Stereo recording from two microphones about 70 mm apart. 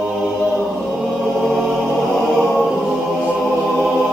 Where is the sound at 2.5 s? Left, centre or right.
Centre.